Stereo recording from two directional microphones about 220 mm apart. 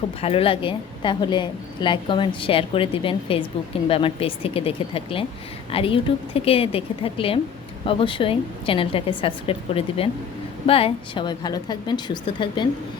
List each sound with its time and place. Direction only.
0.2 s a woman's voice: 25° left (ahead or behind)